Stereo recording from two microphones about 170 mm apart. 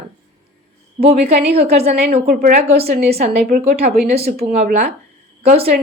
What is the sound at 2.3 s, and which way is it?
Speech, 55° right (ahead or behind).